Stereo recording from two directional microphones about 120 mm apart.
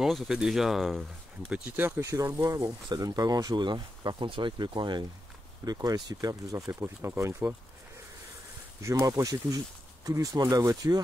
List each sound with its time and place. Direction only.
0.0 s speech: 5° right (ahead or behind)
1.5 s speech: 15° right (ahead or behind)
8.8 s speech: 25° right (ahead or behind)